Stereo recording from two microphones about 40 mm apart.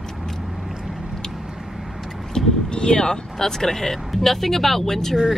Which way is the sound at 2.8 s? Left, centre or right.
Centre.